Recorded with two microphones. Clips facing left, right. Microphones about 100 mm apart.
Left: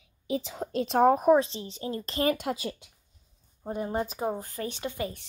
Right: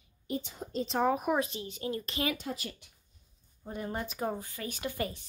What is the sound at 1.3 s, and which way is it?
A woman's voice, 30° left (ahead or behind).